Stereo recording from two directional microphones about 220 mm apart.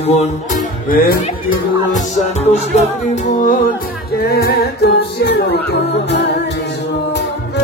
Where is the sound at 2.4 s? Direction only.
30° left (ahead or behind).